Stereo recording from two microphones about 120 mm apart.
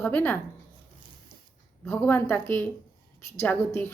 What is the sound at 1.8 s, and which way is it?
A woman's voice, 15° left (ahead or behind).